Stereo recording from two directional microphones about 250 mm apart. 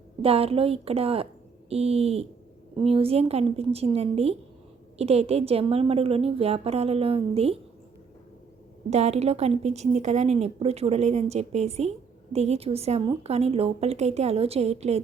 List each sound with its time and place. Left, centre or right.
0.2 s a woman's voice: right
8.9 s a woman's voice: right